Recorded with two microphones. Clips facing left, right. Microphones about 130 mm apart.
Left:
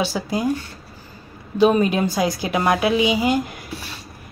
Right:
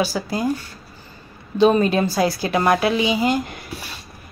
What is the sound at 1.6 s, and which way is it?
A woman's voice, 10° left (ahead or behind).